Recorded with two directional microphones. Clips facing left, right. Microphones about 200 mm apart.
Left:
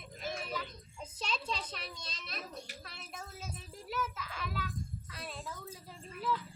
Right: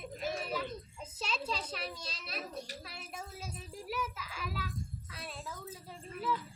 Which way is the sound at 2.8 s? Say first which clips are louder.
Right 2 dB; 5° right (ahead or behind).